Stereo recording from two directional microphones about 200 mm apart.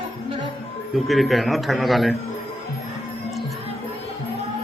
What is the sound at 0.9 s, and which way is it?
Speech, centre (ahead or behind).